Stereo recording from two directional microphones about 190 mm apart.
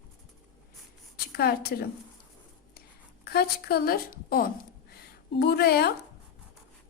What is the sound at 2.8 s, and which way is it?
A woman's voice, 55° left (ahead or behind).